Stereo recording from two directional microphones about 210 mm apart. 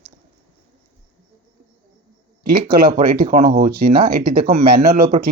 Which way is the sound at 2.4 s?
45° right (ahead or behind).